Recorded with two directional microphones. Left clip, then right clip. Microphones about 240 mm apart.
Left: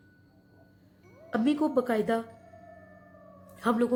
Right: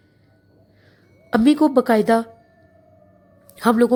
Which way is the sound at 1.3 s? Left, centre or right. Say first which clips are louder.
Right 11 dB; right.